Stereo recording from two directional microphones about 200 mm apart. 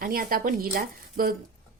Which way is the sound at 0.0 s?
45° right (ahead or behind).